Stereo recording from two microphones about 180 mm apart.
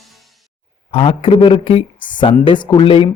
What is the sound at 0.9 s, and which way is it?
Speech, 30° left (ahead or behind).